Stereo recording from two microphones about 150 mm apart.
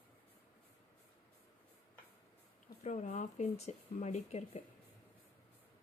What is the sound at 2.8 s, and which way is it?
Speech, 55° left (ahead or behind).